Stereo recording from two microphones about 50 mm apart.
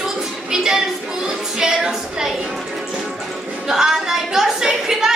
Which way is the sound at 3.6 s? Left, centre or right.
Centre.